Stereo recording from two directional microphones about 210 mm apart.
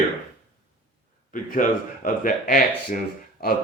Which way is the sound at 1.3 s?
40° left (ahead or behind).